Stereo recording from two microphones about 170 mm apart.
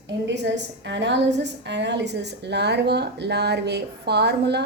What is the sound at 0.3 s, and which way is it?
A woman's voice, 90° right.